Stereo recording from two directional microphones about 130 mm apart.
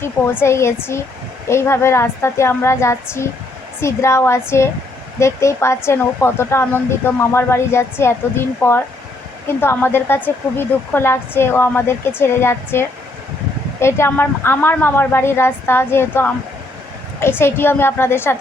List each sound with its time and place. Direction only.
0.4 s speech: 20° left (ahead or behind)